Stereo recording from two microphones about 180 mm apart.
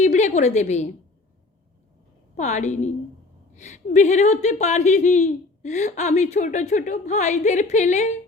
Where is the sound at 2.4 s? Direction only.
40° left (ahead or behind).